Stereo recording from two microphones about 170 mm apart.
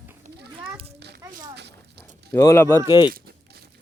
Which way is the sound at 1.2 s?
25° right (ahead or behind).